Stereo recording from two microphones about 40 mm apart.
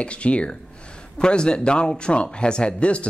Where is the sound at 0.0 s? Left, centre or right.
Left.